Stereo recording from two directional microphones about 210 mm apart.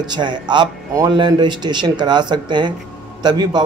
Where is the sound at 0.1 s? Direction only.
20° right (ahead or behind).